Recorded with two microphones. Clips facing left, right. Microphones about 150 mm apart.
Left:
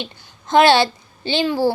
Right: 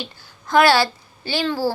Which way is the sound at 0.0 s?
20° left (ahead or behind).